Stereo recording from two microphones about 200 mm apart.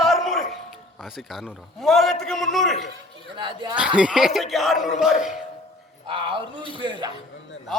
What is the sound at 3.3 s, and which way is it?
Speech, 25° right (ahead or behind).